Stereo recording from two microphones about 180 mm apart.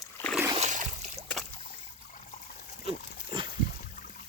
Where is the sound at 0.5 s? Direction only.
40° right (ahead or behind).